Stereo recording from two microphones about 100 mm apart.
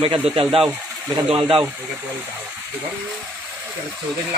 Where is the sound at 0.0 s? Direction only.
65° right (ahead or behind).